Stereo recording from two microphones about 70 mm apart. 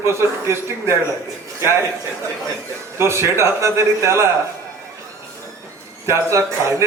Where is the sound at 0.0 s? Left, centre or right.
Right.